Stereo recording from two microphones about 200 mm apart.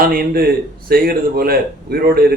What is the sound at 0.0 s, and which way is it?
Speech, 45° right (ahead or behind).